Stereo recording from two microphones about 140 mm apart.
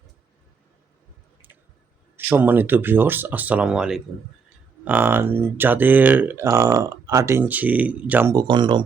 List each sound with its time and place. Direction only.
2.1 s speech: 15° right (ahead or behind)
8.4 s speech: 30° right (ahead or behind)